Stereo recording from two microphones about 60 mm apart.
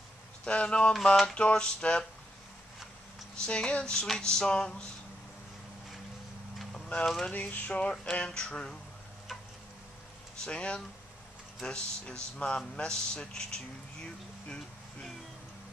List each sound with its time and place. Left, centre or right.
0.5 s speech: centre
3.3 s speech: centre
6.7 s a sound: left
7.9 s speech: centre
10.4 s speech: centre